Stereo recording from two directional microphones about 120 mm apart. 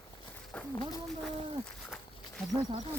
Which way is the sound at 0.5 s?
10° left (ahead or behind).